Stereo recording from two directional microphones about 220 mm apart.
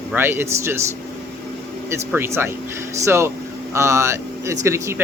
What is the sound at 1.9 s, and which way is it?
Speech, 10° right (ahead or behind).